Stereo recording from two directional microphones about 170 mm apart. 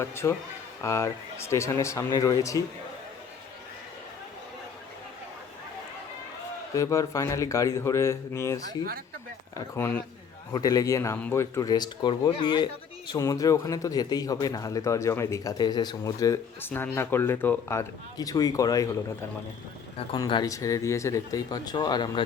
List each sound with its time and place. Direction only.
0.0 s speech: 15° left (ahead or behind)
6.7 s a man's voice: 20° left (ahead or behind)
20.1 s a man's voice: 25° left (ahead or behind)